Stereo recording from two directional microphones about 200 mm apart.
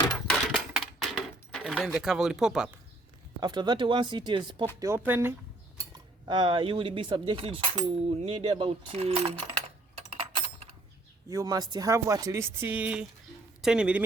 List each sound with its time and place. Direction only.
0.3 s a sound: centre (ahead or behind)
3.4 s speech: 20° right (ahead or behind)
4.8 s speech: 10° right (ahead or behind)
5.7 s speech: 20° right (ahead or behind)
10.1 s typing: 30° right (ahead or behind)
11.3 s speech: 15° right (ahead or behind)